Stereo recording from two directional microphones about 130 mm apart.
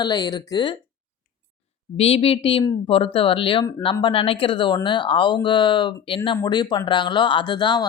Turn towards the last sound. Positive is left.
turn(degrees=35)  # may be behind; listen again after turning